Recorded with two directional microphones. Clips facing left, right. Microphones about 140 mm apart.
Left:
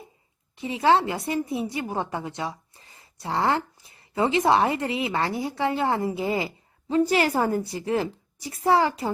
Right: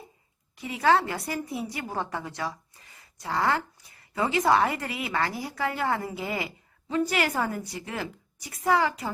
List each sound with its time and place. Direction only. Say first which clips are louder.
0.5 s a woman's voice: left 2 dB; 25° left (ahead or behind)